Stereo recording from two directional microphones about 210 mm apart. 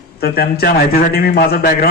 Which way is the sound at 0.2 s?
45° left (ahead or behind).